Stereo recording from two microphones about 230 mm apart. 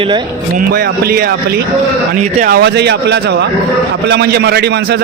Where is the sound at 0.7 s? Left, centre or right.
Right.